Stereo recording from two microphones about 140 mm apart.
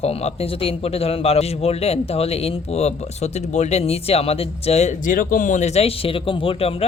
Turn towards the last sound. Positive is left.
turn(degrees=40)  # may be behind; listen again after turning